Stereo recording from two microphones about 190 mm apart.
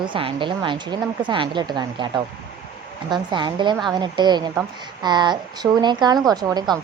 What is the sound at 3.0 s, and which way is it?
A woman's voice, 25° right (ahead or behind).